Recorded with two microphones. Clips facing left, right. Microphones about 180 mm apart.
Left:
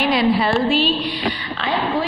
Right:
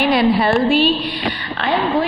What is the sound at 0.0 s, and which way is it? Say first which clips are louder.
A woman's voice: right 2 dB; 55° right (ahead or behind).